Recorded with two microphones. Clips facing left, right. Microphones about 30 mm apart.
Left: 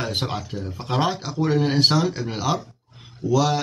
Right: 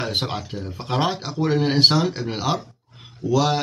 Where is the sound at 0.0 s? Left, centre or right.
Centre.